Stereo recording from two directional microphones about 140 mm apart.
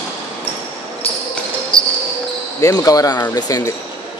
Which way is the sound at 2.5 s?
25° left (ahead or behind).